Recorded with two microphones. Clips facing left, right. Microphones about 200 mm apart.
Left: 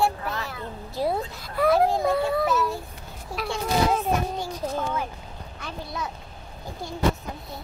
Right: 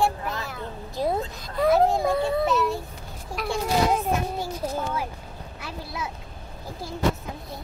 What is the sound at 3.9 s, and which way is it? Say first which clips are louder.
Speech: even; 10° right (ahead or behind).